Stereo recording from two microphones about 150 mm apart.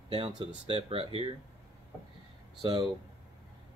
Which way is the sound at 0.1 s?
35° right (ahead or behind).